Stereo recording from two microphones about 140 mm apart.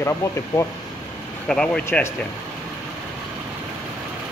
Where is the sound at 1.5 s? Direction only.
5° left (ahead or behind).